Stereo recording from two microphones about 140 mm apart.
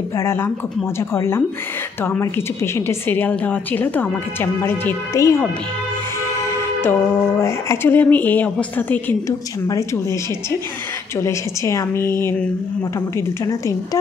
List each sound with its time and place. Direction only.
0.2 s a woman's voice: 15° left (ahead or behind)
6.8 s a woman's voice: 20° left (ahead or behind)
11.1 s speech: 20° left (ahead or behind)